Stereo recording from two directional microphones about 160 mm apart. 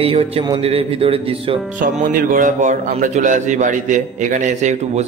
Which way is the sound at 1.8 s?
55° right (ahead or behind).